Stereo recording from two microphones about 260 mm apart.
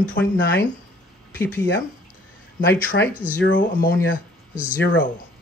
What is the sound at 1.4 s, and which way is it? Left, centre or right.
Speech, centre.